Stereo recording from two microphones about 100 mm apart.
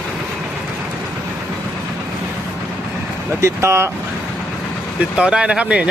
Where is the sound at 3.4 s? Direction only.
30° right (ahead or behind).